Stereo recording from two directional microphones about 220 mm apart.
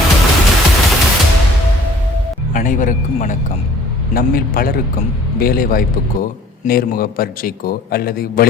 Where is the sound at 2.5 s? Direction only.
35° left (ahead or behind).